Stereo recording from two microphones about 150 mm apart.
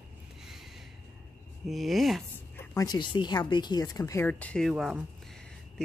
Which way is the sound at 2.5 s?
20° left (ahead or behind).